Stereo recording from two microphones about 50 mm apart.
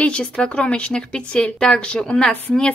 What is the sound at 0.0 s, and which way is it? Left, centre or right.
A woman's voice, left.